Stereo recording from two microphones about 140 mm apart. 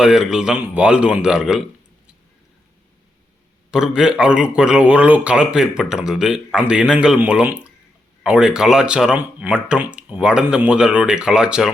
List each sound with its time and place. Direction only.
0.0 s a man's voice: 5° right (ahead or behind)
3.7 s a man's voice: 5° right (ahead or behind)